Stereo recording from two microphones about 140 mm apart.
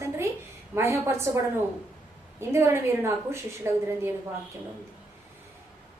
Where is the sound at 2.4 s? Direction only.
20° right (ahead or behind).